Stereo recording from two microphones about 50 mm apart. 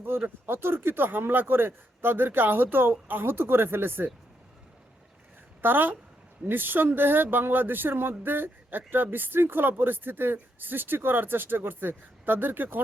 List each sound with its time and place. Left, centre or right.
0.0 s speech: right
5.6 s a woman's voice: right